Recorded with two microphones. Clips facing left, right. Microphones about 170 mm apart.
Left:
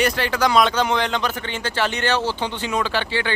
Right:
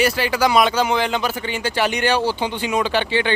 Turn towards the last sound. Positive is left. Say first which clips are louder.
# right 4 dB
turn(degrees=-20)  # may be behind; listen again after turning